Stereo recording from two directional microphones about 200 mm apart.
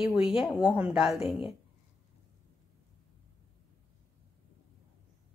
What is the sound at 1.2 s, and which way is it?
Speech, 25° left (ahead or behind).